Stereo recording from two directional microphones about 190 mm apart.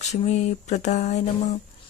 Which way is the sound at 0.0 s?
35° left (ahead or behind).